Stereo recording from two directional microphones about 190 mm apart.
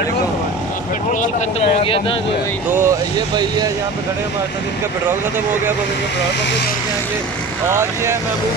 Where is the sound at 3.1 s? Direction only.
20° right (ahead or behind).